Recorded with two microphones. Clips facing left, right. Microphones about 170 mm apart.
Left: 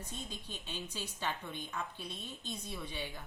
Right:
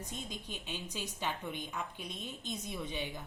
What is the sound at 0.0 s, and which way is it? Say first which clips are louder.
A woman's voice: right 2 dB; 15° right (ahead or behind).